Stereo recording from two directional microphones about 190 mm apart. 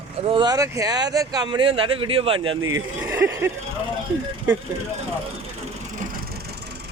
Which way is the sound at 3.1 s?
10° right (ahead or behind).